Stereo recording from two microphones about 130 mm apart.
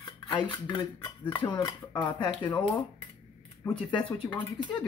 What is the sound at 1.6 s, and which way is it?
Speech, 35° left (ahead or behind).